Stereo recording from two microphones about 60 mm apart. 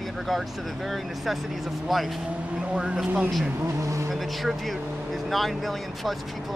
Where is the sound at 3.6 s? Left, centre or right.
Right.